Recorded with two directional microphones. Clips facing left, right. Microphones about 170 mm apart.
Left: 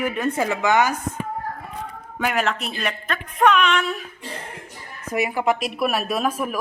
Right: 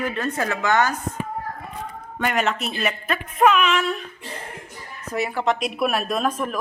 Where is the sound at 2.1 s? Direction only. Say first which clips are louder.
Even; 5° left (ahead or behind).